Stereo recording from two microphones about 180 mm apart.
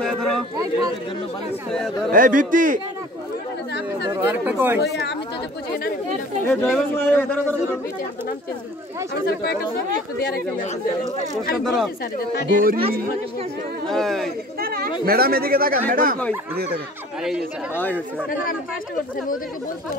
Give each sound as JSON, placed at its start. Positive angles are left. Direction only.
{"t": 0.0, "sound": "a sound", "side_deg": 5}
{"t": 2.0, "sound": "speech", "side_deg": -50}
{"t": 4.1, "sound": "chatter", "side_deg": -10}
{"t": 4.8, "sound": "speech", "side_deg": 65}
{"t": 6.4, "sound": "a man's voice", "side_deg": 5}
{"t": 9.1, "sound": "speech", "side_deg": 55}
{"t": 11.5, "sound": "speech", "side_deg": 0}
{"t": 12.5, "sound": "speech", "side_deg": -55}
{"t": 13.8, "sound": "speech", "side_deg": 0}
{"t": 14.6, "sound": "speech", "side_deg": -55}
{"t": 17.7, "sound": "a man's voice", "side_deg": 10}